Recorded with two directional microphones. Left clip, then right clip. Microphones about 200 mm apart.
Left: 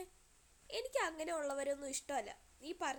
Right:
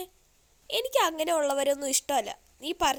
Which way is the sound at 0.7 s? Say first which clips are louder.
Right 13 dB; 40° right (ahead or behind).